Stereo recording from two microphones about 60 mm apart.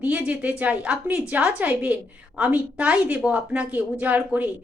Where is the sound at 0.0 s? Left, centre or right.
Right.